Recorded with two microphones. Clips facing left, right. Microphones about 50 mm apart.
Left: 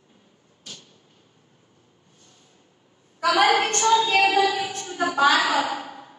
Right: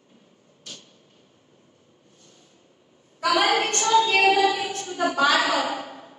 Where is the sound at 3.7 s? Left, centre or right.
Centre.